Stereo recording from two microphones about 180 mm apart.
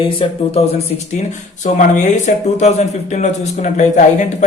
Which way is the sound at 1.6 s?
45° left (ahead or behind).